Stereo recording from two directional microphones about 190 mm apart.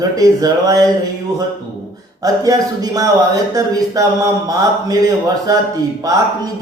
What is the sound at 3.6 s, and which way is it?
Speech, 20° right (ahead or behind).